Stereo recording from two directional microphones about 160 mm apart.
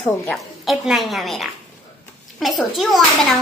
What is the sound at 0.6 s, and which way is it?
A child's voice, centre (ahead or behind).